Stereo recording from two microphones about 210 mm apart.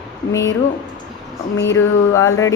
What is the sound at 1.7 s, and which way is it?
Speech, 15° left (ahead or behind).